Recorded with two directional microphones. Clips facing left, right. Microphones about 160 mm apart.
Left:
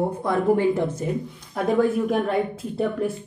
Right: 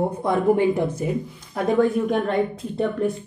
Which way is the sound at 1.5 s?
Centre (ahead or behind).